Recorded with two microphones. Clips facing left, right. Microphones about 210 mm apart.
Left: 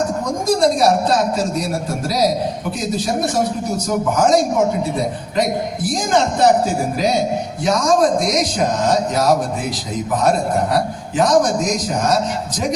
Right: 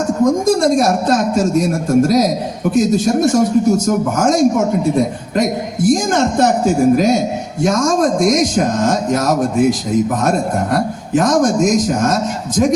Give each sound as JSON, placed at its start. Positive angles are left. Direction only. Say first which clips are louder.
{"t": 0.3, "sound": "a man's voice", "louder": "right 2 dB", "side_deg": -50}